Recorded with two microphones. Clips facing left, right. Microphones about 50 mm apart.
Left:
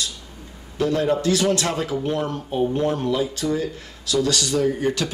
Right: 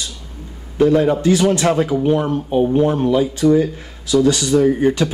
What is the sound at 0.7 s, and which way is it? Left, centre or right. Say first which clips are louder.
A man's voice: right 7 dB; right.